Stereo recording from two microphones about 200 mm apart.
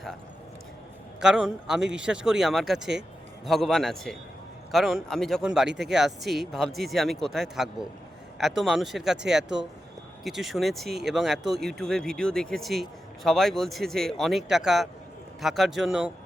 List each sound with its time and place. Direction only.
1.2 s speech: 5° right (ahead or behind)
5.6 s speech: 60° right (ahead or behind)
5.9 s speech: centre (ahead or behind)